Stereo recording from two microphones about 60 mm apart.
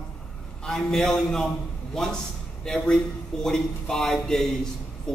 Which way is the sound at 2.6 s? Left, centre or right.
Centre.